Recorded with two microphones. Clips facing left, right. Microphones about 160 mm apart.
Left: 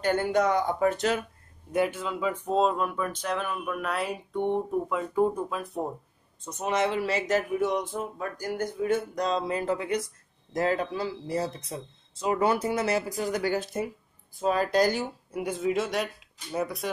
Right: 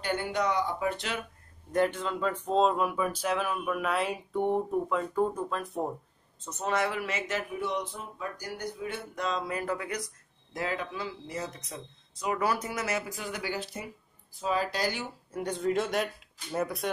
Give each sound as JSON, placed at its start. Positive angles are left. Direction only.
{"t": 0.0, "sound": "speech", "side_deg": 45}
{"t": 1.7, "sound": "speech", "side_deg": 10}
{"t": 6.4, "sound": "speech", "side_deg": 15}
{"t": 9.4, "sound": "speech", "side_deg": 25}
{"t": 10.5, "sound": "speech", "side_deg": 40}
{"t": 15.3, "sound": "speech", "side_deg": 5}